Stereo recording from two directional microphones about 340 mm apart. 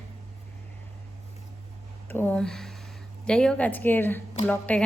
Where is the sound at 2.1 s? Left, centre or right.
Centre.